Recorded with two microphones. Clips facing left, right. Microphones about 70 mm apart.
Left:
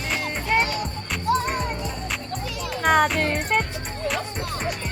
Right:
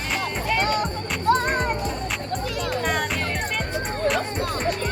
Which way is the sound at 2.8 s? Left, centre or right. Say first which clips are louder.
Left 6 dB; left.